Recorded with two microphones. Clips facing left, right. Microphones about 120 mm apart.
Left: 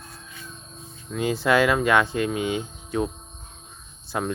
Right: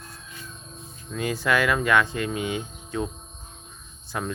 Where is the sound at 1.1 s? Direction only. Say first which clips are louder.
Left 3 dB; 15° left (ahead or behind).